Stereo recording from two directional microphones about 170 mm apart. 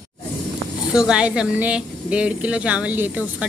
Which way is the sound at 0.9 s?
5° right (ahead or behind).